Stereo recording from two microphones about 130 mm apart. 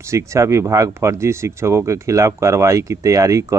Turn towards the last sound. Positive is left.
turn(degrees=-25)  # may be behind; listen again after turning